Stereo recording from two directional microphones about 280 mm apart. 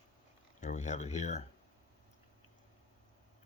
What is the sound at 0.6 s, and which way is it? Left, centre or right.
Speech, left.